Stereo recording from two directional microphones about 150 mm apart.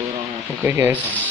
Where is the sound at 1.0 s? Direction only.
10° left (ahead or behind).